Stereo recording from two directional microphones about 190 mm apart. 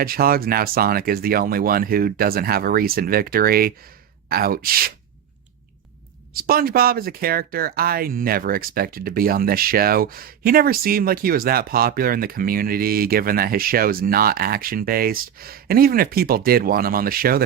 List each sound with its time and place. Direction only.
0.0 s speech: 50° right (ahead or behind)
6.3 s speech: 50° right (ahead or behind)